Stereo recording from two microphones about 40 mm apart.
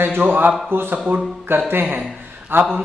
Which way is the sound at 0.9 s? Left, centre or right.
Right.